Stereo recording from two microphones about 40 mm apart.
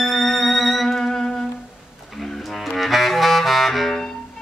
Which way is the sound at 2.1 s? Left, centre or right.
Centre.